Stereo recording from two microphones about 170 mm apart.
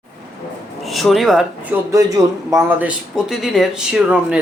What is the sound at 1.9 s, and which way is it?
Speech, 20° right (ahead or behind).